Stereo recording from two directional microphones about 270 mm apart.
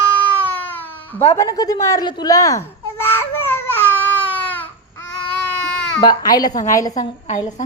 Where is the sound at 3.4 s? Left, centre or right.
Centre.